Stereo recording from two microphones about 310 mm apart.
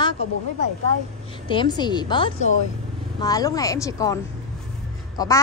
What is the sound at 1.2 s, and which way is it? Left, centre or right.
A woman's voice, centre.